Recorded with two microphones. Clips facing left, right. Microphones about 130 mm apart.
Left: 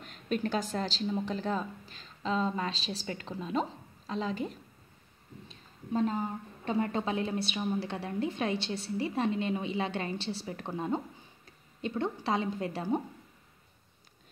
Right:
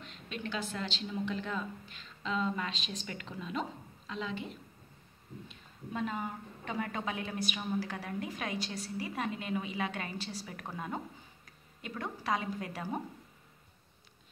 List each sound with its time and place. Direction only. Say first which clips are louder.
0.0 s a woman's voice: left 9 dB; 45° left (ahead or behind); by 13.0 s 25° left (ahead or behind)